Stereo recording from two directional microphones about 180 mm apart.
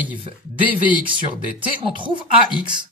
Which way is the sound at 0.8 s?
25° right (ahead or behind).